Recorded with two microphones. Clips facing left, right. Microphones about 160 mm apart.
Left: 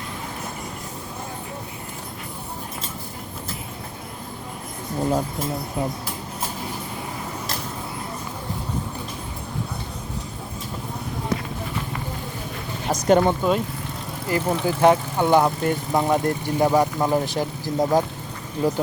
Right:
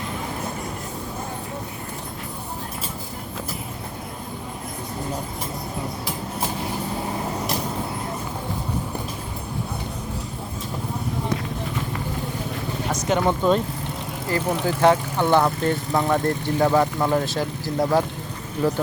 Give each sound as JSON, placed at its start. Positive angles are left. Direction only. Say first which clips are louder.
{"t": 12.9, "sound": "vehicle", "louder": "left 6 dB", "side_deg": 45}
{"t": 13.2, "sound": "speech", "louder": "right 1 dB", "side_deg": 10}